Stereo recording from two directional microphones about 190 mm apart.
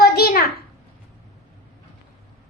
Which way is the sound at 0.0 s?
55° left (ahead or behind).